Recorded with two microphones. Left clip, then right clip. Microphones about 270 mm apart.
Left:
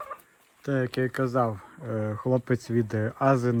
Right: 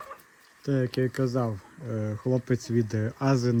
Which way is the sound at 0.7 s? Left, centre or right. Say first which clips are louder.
Left 1 dB; centre.